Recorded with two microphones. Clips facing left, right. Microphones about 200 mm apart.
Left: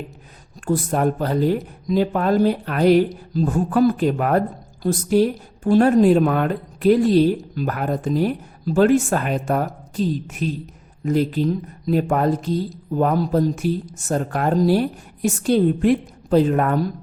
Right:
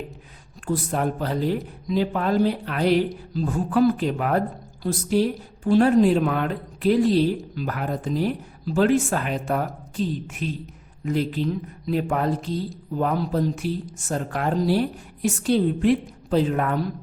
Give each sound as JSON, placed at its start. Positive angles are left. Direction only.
{"t": 0.6, "sound": "speech", "side_deg": 45}